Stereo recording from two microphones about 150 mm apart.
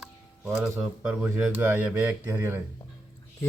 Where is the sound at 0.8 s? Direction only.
5° right (ahead or behind).